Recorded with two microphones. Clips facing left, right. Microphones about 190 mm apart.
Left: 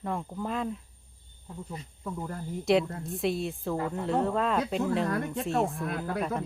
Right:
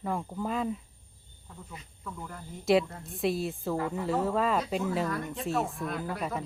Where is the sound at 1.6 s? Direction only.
35° left (ahead or behind).